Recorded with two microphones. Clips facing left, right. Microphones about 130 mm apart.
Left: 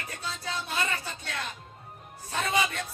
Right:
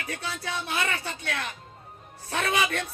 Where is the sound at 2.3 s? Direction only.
70° right (ahead or behind).